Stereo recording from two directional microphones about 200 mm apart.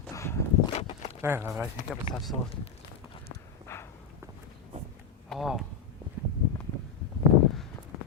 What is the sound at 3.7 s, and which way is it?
Walk, 10° left (ahead or behind).